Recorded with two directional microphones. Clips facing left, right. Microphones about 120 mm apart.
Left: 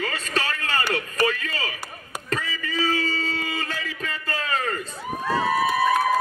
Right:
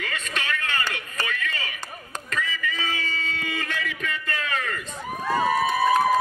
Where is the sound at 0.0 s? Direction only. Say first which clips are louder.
Left 4 dB; 35° left (ahead or behind).